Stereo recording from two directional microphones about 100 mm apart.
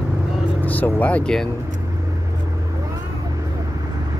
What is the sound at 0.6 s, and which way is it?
Speech, 15° left (ahead or behind).